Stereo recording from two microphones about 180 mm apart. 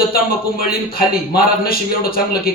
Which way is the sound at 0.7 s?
55° left (ahead or behind).